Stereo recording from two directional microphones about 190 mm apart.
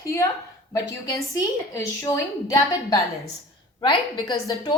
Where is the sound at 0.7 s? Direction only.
15° left (ahead or behind).